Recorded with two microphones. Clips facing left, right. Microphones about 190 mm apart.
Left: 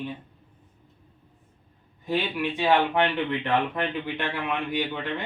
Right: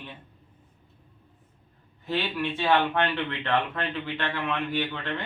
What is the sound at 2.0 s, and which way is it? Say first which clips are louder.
Speech: left 2 dB; 15° left (ahead or behind).